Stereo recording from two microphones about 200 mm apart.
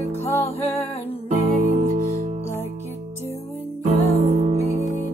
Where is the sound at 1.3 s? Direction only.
35° right (ahead or behind).